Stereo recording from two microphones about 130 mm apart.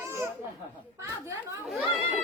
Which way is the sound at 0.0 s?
20° right (ahead or behind).